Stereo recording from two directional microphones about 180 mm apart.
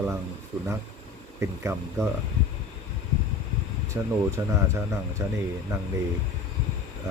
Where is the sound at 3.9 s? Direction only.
15° right (ahead or behind).